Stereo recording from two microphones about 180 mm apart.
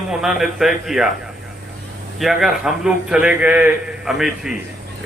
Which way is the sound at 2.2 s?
Centre (ahead or behind).